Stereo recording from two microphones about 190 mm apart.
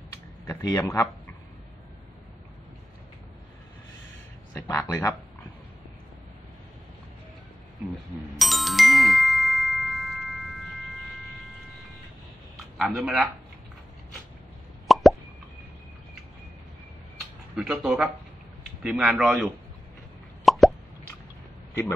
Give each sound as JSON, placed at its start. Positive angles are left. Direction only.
{"t": 0.5, "sound": "speech", "side_deg": 20}
{"t": 4.6, "sound": "a man's voice", "side_deg": 15}
{"t": 8.4, "sound": "music", "side_deg": 0}
{"t": 12.7, "sound": "a man's voice", "side_deg": 0}
{"t": 14.9, "sound": "plop", "side_deg": 0}
{"t": 17.6, "sound": "a man's voice", "side_deg": -5}
{"t": 20.4, "sound": "plop", "side_deg": 0}